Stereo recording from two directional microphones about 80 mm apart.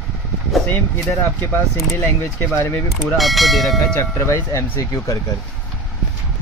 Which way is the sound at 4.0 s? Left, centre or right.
Left.